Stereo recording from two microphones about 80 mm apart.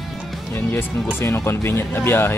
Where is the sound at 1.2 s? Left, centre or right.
Left.